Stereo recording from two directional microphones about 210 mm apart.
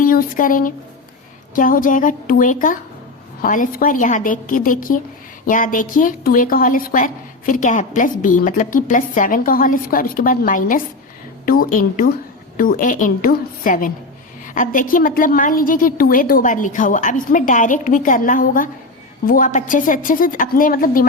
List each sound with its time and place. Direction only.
0.0 s a woman's voice: 40° left (ahead or behind)